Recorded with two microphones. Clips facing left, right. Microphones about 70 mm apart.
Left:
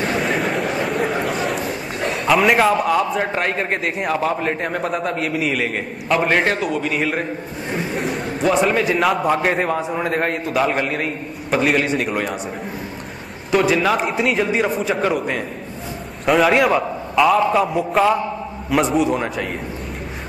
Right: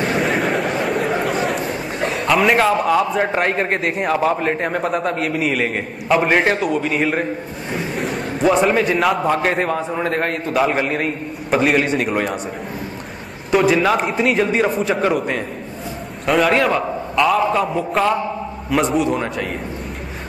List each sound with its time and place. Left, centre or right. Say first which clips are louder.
0.2 s a sound: right 2 dB; centre
3.3 s a man's voice: right 3 dB; centre
13.5 s a man's voice: right 2 dB; centre